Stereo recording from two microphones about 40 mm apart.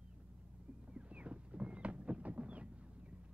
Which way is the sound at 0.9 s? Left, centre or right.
Right.